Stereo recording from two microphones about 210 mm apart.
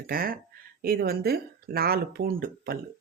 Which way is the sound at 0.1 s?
45° right (ahead or behind).